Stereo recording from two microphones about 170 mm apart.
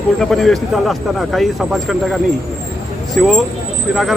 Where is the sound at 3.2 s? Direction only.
5° left (ahead or behind).